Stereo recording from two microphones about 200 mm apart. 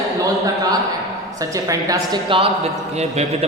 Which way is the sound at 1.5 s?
15° right (ahead or behind).